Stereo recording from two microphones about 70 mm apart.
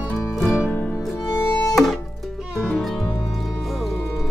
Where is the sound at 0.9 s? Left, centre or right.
Centre.